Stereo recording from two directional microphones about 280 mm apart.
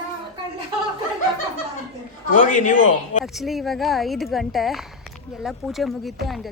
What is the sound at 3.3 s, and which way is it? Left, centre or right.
A woman's voice, centre.